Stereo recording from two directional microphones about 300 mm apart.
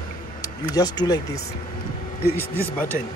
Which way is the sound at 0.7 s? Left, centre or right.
Centre.